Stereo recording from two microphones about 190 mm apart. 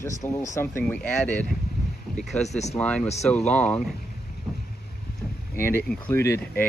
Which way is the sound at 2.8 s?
5° left (ahead or behind).